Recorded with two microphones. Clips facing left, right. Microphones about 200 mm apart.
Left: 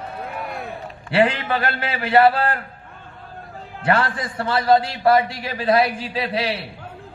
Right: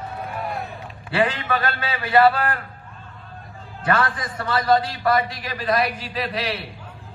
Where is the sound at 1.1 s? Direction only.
25° left (ahead or behind).